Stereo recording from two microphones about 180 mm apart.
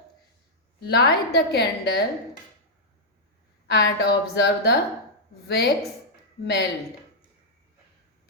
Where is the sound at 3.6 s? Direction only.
75° left (ahead or behind).